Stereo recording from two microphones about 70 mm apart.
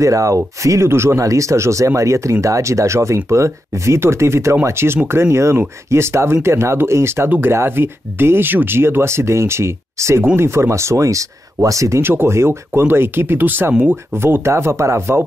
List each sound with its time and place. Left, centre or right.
0.0 s speech: right
1.2 s speech: right
7.2 s speech: right
12.0 s speech: right